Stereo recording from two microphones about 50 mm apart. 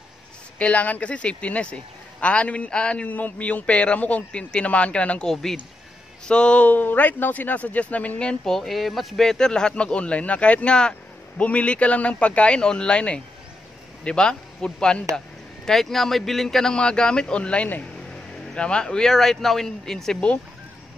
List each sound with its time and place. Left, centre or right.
0.6 s a man's voice: left
3.1 s a man's voice: left
5.2 s a man's voice: centre
6.2 s a man's voice: left
6.7 s speech: left
8.5 s a man's voice: centre